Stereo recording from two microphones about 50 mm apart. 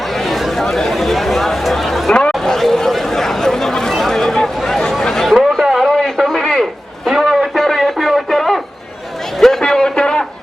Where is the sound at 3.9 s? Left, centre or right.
Centre.